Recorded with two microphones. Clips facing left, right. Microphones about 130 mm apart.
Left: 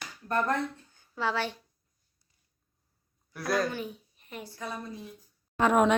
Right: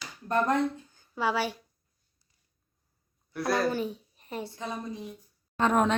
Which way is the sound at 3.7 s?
35° right (ahead or behind).